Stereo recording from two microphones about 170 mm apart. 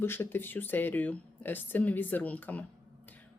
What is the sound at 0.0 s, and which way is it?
Speech, 15° left (ahead or behind).